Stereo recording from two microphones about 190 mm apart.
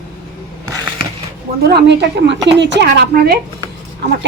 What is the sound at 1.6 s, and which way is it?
A woman's voice, 60° right (ahead or behind).